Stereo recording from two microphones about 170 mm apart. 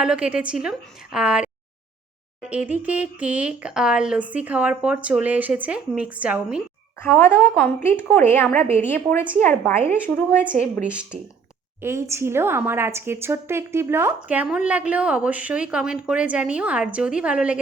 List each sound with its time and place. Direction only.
0.0 s a woman's voice: 5° right (ahead or behind)
2.5 s a woman's voice: 10° right (ahead or behind)
7.0 s speech: 10° left (ahead or behind)
8.5 s a woman's voice: 35° right (ahead or behind)
8.9 s a woman's voice: 10° left (ahead or behind)
11.8 s a woman's voice: 15° right (ahead or behind)